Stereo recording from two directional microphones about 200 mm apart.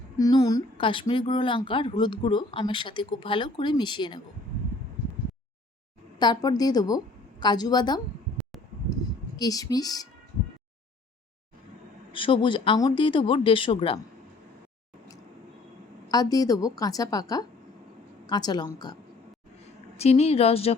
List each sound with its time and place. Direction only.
0.2 s speech: 20° left (ahead or behind)
6.1 s speech: 20° left (ahead or behind)
9.4 s speech: 15° left (ahead or behind)
12.1 s speech: 25° left (ahead or behind)
16.1 s a woman's voice: 20° left (ahead or behind)
20.0 s speech: 30° left (ahead or behind)